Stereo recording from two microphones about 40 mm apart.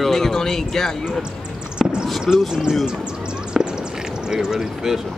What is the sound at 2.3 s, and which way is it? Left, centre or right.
Speech, centre.